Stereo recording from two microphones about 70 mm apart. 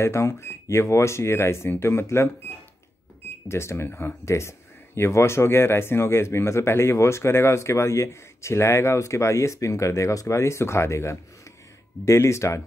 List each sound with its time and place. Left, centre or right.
0.0 s speech: left
3.4 s speech: left